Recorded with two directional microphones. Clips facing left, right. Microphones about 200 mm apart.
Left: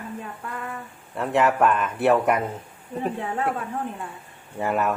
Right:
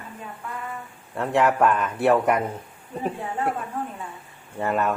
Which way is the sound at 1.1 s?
Centre (ahead or behind).